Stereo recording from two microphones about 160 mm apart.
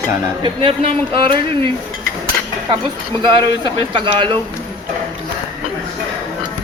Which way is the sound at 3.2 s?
30° right (ahead or behind).